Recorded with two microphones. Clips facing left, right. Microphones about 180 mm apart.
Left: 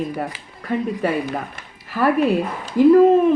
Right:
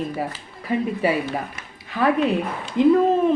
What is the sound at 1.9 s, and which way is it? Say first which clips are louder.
Speech: left 2 dB; 5° left (ahead or behind).